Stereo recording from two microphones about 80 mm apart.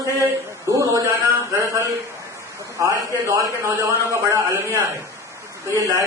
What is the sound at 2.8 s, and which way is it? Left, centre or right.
A man's voice, right.